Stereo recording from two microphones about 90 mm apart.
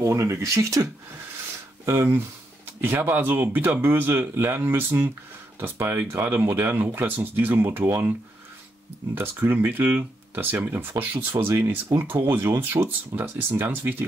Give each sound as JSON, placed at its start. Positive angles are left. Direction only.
{"t": 0.0, "sound": "speech", "side_deg": -30}
{"t": 1.9, "sound": "speech", "side_deg": -30}
{"t": 9.1, "sound": "speech", "side_deg": -25}